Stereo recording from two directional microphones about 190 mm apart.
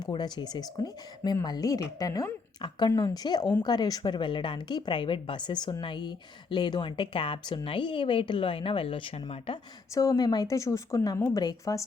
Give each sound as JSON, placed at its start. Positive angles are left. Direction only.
{"t": 0.0, "sound": "a woman's voice", "side_deg": 20}